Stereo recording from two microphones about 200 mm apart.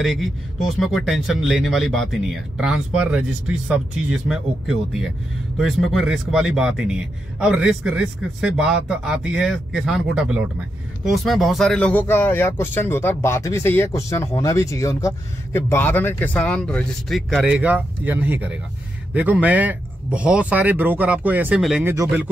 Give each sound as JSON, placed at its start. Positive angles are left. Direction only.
{"t": 0.0, "sound": "speech", "side_deg": 0}
{"t": 21.8, "sound": "speech", "side_deg": -15}